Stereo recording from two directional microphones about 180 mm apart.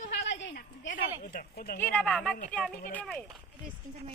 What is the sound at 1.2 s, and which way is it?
Speech, 55° left (ahead or behind).